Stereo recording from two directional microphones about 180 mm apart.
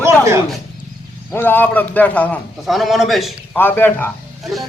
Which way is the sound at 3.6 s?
10° left (ahead or behind).